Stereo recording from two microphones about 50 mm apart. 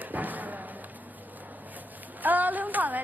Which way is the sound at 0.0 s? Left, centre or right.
Right.